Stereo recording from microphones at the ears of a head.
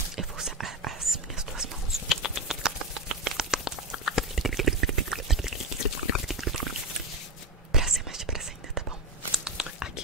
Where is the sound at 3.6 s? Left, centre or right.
Left.